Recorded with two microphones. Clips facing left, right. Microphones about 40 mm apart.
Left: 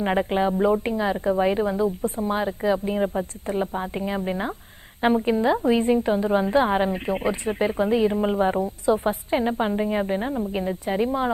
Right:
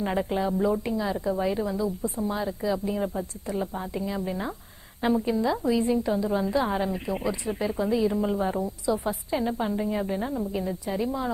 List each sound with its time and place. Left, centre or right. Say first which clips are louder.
0.0 s a woman's voice: left 5 dB; left